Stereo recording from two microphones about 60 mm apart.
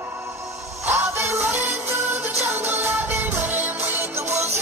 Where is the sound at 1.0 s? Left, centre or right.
Right.